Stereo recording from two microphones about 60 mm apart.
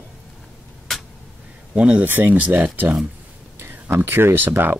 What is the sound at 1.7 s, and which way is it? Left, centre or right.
Speech, centre.